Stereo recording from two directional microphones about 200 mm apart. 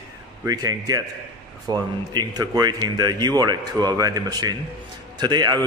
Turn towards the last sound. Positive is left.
turn(degrees=-20)  # may be behind; listen again after turning